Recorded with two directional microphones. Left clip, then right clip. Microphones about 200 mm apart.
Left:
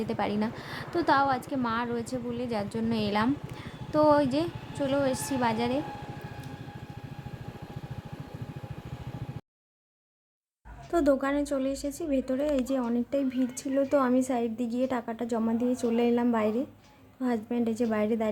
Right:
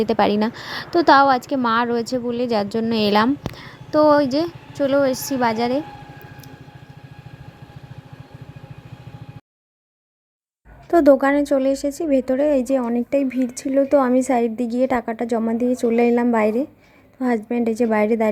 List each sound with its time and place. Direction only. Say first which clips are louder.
0.0 s a woman's voice: right 12 dB; 35° right (ahead or behind)
10.9 s a woman's voice: right 12 dB; 35° right (ahead or behind)